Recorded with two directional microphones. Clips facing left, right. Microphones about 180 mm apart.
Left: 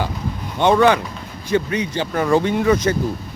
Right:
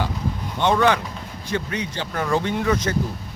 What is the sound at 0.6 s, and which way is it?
Speech, 10° left (ahead or behind).